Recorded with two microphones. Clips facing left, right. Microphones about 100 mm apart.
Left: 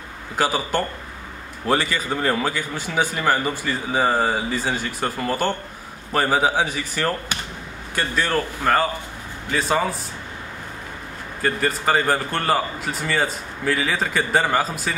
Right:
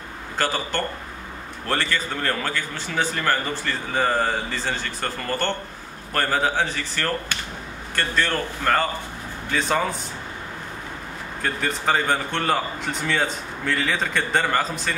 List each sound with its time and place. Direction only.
0.4 s a man's voice: 10° left (ahead or behind)
11.4 s a man's voice: 5° left (ahead or behind)